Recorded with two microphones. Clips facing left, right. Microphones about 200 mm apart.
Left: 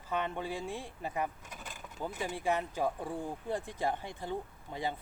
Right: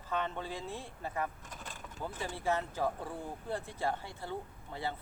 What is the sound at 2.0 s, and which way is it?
Speech, 15° left (ahead or behind).